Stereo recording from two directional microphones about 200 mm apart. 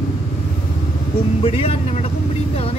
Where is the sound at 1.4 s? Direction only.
30° left (ahead or behind).